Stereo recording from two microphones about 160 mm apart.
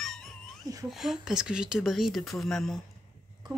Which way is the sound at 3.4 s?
25° right (ahead or behind).